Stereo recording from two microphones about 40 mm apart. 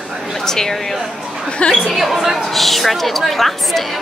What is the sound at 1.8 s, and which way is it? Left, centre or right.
Speech, centre.